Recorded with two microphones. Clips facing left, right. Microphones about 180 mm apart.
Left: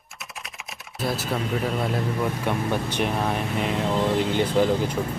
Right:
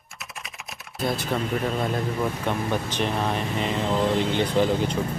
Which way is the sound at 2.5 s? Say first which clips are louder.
Left 1 dB; 10° left (ahead or behind).